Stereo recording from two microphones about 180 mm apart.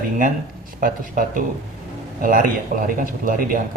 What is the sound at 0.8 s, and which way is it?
Speech, 50° right (ahead or behind).